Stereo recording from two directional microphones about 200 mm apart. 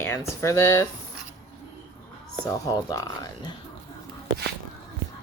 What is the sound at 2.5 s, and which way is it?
Speech, 15° left (ahead or behind).